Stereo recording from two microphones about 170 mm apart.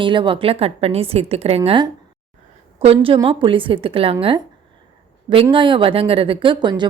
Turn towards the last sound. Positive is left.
turn(degrees=-25)  # may be behind; listen again after turning